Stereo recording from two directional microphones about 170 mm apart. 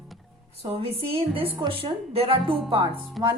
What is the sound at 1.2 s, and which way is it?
Speech, 30° right (ahead or behind).